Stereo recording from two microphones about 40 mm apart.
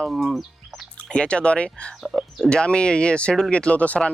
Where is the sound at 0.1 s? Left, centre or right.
Centre.